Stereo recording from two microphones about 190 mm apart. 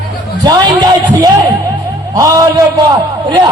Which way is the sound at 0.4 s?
20° right (ahead or behind).